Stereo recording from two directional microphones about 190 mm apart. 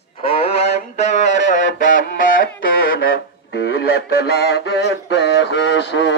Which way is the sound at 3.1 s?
60° left (ahead or behind).